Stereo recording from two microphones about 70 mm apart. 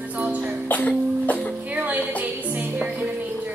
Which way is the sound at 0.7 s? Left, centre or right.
Left.